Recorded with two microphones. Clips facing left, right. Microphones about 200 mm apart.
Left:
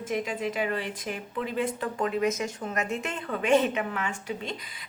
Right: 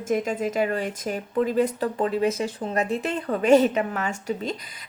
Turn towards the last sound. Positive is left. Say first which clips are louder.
# right 5 dB
turn(degrees=-40)  # may be behind; listen again after turning